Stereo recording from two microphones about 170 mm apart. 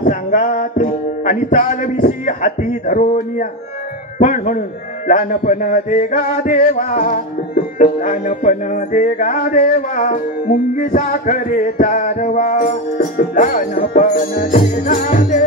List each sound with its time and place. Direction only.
0.0 s a man's voice: 45° left (ahead or behind)